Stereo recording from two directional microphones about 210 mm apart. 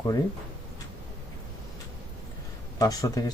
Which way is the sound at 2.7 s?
15° left (ahead or behind).